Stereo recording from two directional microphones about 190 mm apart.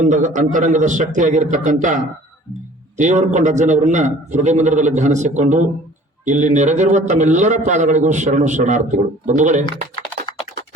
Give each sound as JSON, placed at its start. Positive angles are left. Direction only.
{"t": 0.0, "sound": "a man's voice", "side_deg": -40}
{"t": 3.0, "sound": "a man's voice", "side_deg": -40}